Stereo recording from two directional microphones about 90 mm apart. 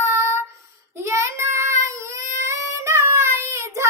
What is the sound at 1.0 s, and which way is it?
Child singing, 35° right (ahead or behind).